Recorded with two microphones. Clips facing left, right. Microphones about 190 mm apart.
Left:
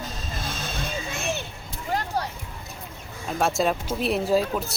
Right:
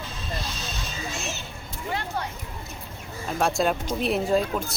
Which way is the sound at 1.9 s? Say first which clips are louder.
Left 3 dB; 40° left (ahead or behind).